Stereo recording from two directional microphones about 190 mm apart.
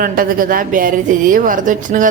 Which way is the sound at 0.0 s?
50° right (ahead or behind).